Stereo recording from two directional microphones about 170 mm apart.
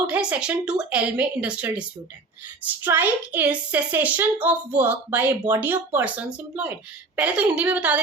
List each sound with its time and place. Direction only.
0.1 s a woman's voice: 5° right (ahead or behind)